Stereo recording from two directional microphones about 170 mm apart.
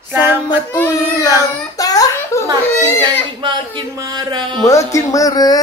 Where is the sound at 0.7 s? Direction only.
15° left (ahead or behind).